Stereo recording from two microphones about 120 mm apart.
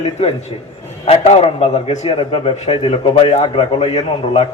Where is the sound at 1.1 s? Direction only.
60° left (ahead or behind).